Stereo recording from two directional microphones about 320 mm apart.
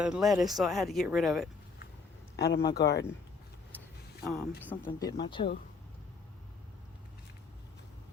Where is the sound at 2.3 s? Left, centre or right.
Left.